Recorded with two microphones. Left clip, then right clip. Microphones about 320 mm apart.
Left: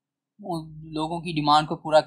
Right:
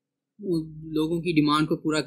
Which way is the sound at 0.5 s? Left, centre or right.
Centre.